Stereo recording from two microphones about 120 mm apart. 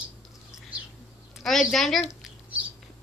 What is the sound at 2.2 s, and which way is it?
Rodents, 10° right (ahead or behind).